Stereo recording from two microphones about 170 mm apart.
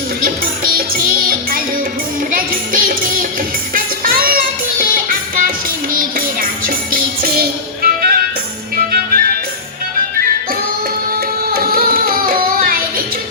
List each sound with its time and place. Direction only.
1.3 s music: 60° right (ahead or behind)
11.4 s music: 60° right (ahead or behind)